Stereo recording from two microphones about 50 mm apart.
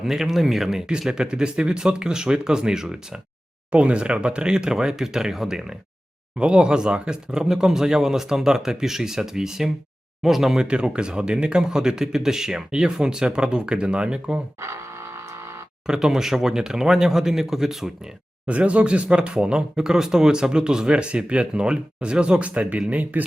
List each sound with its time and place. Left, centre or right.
0.0 s speech: centre
3.7 s speech: right
14.6 s a sound: right
15.9 s speech: centre
18.4 s speech: right